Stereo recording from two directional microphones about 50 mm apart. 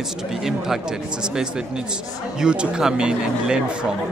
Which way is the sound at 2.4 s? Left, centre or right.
Centre.